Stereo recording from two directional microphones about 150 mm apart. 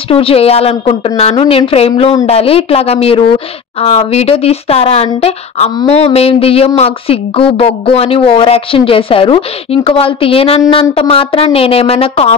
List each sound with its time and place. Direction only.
0.1 s speech: 40° left (ahead or behind)